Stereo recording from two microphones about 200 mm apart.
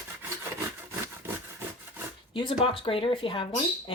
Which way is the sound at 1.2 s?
10° right (ahead or behind).